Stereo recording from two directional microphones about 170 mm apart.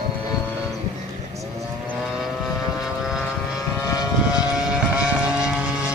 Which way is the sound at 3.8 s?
20° left (ahead or behind).